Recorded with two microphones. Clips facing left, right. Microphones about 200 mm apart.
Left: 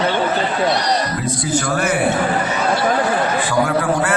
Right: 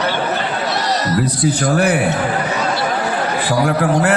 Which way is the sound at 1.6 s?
60° right (ahead or behind).